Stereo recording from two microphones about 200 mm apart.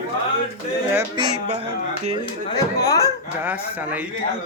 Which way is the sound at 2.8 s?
15° left (ahead or behind).